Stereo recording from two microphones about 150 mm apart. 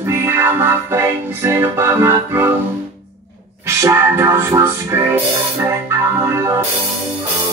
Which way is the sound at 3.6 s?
15° right (ahead or behind).